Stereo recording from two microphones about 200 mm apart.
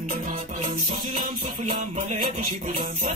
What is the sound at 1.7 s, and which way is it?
Music, 35° right (ahead or behind).